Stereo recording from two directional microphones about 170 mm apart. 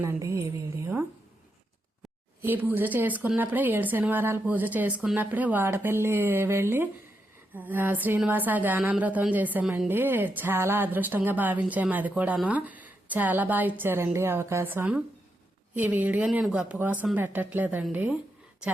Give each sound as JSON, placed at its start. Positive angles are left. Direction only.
{"t": 0.0, "sound": "speech", "side_deg": -15}
{"t": 2.4, "sound": "speech", "side_deg": -10}